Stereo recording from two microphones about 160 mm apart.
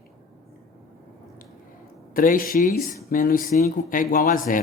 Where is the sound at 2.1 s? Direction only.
60° left (ahead or behind).